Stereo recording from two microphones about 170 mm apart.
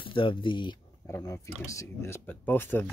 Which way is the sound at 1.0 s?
15° left (ahead or behind).